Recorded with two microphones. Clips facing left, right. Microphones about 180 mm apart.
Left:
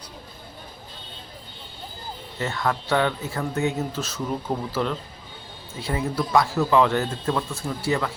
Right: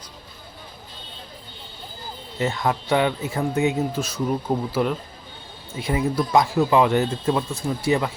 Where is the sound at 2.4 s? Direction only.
15° right (ahead or behind).